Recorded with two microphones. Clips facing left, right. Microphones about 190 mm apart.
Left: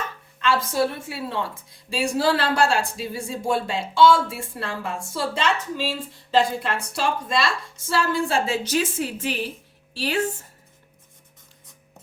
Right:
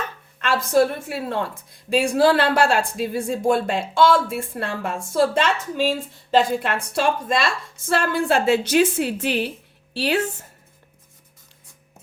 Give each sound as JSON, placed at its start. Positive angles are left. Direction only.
{"t": 0.3, "sound": "a woman's voice", "side_deg": -50}